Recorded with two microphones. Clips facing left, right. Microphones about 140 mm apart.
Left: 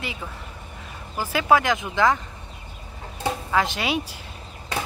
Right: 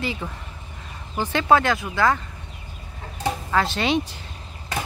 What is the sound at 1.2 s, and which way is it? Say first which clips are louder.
Speech: right 1 dB; 5° left (ahead or behind).